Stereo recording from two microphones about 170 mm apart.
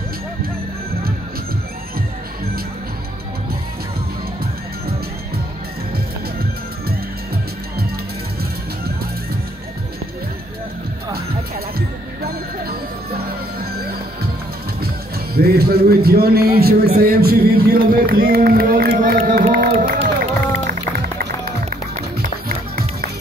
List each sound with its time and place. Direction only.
12.2 s music: 65° right (ahead or behind)
15.3 s a man's voice: 65° right (ahead or behind)
19.5 s crowd: 60° right (ahead or behind)
20.9 s music: 65° right (ahead or behind)